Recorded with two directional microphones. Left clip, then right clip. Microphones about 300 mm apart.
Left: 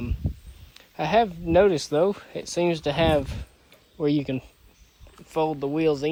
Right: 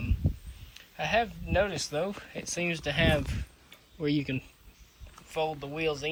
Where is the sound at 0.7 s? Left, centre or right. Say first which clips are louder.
Left 6 dB; centre.